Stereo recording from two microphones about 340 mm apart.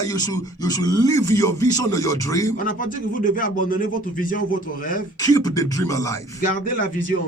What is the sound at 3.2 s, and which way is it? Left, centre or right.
Speech, left.